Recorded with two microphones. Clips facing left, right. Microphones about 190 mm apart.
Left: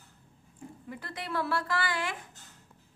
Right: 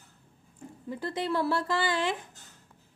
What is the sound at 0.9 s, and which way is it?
A woman's voice, 25° right (ahead or behind).